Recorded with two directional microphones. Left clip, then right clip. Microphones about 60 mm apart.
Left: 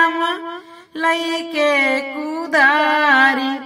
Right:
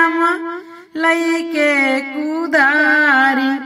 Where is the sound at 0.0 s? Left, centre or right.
Left.